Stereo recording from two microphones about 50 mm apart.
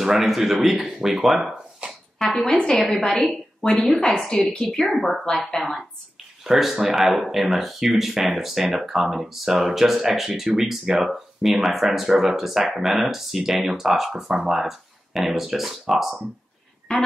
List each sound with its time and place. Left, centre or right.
0.0 s speech: centre
3.1 s speech: centre
4.3 s a woman's voice: centre
4.6 s speech: centre
6.4 s speech: centre
16.9 s a sound: centre